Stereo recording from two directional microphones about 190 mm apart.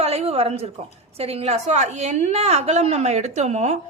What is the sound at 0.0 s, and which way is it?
A woman's voice, 35° right (ahead or behind).